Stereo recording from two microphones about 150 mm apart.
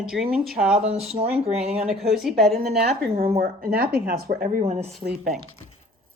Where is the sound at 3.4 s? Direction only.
85° right; by 4.9 s 55° right (ahead or behind).